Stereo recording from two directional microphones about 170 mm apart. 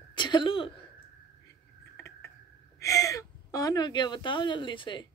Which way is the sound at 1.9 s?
15° left (ahead or behind).